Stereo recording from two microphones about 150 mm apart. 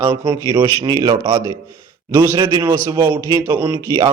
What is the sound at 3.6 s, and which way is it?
Speech, 30° right (ahead or behind).